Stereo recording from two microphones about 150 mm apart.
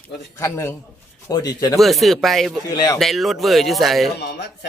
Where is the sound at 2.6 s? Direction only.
25° left (ahead or behind).